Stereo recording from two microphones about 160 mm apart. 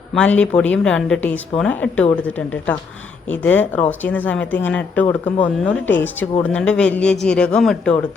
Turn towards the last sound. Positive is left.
turn(degrees=5)  # may be behind; listen again after turning